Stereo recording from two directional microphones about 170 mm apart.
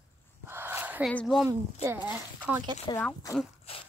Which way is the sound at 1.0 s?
Centre (ahead or behind).